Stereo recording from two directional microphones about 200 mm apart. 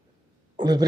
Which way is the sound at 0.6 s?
20° right (ahead or behind).